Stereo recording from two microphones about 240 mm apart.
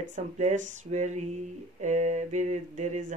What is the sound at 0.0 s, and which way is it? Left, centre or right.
Speech, right.